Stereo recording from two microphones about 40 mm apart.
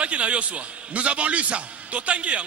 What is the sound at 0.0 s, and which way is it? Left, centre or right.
A man's voice, right.